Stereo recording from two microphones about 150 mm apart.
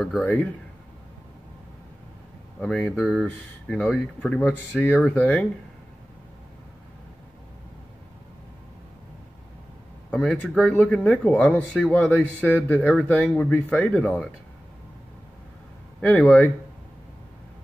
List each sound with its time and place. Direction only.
0.2 s speech: 10° left (ahead or behind)
2.6 s speech: 10° left (ahead or behind)
10.1 s speech: 5° left (ahead or behind)
16.0 s speech: 10° left (ahead or behind)